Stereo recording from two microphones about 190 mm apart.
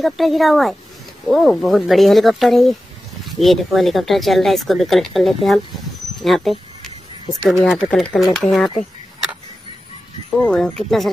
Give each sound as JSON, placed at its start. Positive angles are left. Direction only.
{"t": 0.0, "sound": "speech", "side_deg": 0}
{"t": 10.4, "sound": "speech", "side_deg": 5}